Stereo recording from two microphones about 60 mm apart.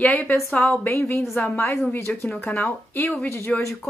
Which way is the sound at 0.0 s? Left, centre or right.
Left.